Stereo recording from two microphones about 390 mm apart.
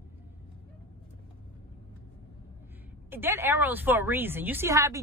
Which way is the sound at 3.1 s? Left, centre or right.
Centre.